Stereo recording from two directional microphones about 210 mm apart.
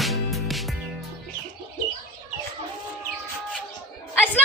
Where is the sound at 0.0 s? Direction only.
Centre (ahead or behind).